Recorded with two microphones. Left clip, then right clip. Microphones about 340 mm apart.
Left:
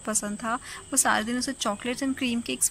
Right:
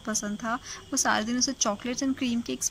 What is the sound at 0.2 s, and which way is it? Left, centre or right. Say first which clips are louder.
Speech: left 1 dB; centre.